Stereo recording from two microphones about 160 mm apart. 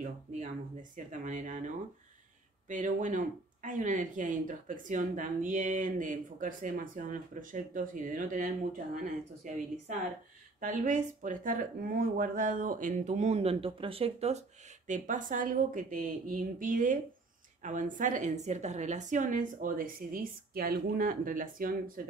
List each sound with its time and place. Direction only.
0.9 s speech: 50° right (ahead or behind)
2.7 s speech: 50° right (ahead or behind)
14.9 s speech: 55° right (ahead or behind)